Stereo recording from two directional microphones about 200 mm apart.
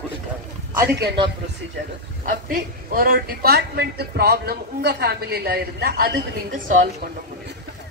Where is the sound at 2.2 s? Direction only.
45° right (ahead or behind).